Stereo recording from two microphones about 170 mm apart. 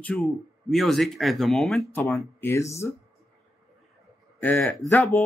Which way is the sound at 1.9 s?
15° left (ahead or behind).